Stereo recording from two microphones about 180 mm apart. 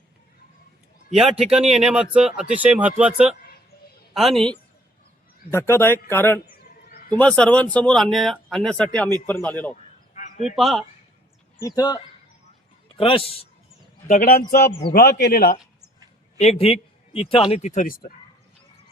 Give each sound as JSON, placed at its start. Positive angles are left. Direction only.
{"t": 1.1, "sound": "speech", "side_deg": -5}
{"t": 5.5, "sound": "speech", "side_deg": 15}
{"t": 10.2, "sound": "honk", "side_deg": 45}
{"t": 10.5, "sound": "speech", "side_deg": 0}
{"t": 11.6, "sound": "a man's voice", "side_deg": 20}
{"t": 14.1, "sound": "speech", "side_deg": 60}
{"t": 16.4, "sound": "a man's voice", "side_deg": 35}